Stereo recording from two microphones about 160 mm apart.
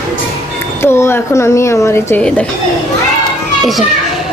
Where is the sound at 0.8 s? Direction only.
15° left (ahead or behind).